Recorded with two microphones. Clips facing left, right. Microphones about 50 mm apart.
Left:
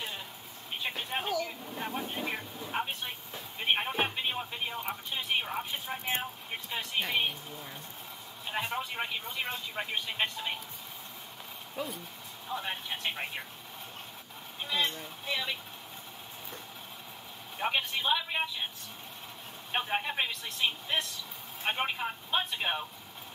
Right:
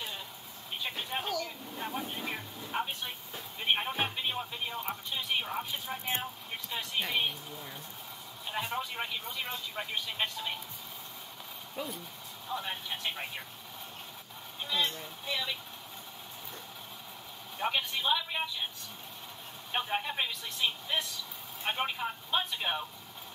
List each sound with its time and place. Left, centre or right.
0.7 s speech: centre
11.7 s speech: centre
14.6 s speech: centre
17.6 s speech: centre
19.7 s speech: centre